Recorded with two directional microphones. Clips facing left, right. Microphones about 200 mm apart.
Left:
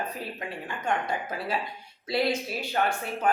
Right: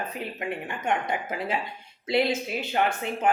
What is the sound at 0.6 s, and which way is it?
Speech, 20° right (ahead or behind).